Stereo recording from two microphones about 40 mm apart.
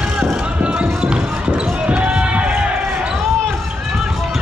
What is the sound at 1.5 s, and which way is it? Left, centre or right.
Basketball bounce, right.